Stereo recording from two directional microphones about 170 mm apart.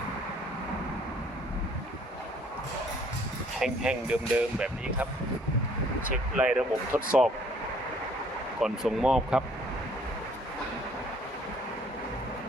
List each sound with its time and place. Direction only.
3.6 s speech: 5° right (ahead or behind)
6.3 s speech: 5° right (ahead or behind)
8.6 s speech: 5° right (ahead or behind)